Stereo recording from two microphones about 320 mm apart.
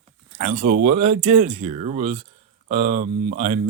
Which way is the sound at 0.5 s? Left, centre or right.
Right.